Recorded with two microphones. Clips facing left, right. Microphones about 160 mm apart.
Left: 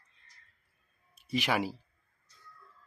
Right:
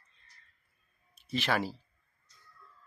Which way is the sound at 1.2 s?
15° left (ahead or behind).